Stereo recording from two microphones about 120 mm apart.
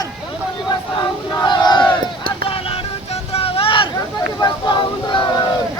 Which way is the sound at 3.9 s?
35° left (ahead or behind).